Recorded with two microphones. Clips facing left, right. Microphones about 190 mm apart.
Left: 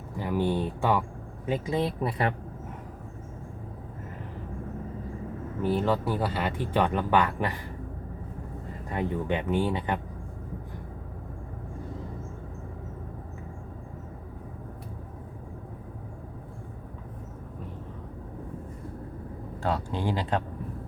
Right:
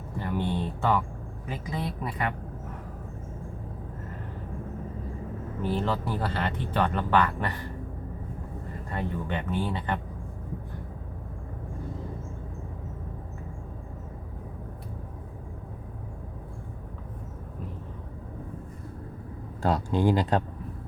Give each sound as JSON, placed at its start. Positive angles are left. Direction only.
{"t": 0.2, "sound": "speech", "side_deg": 10}
{"t": 1.5, "sound": "speech", "side_deg": 25}
{"t": 5.7, "sound": "speech", "side_deg": 5}
{"t": 8.9, "sound": "speech", "side_deg": 15}
{"t": 19.6, "sound": "speech", "side_deg": -45}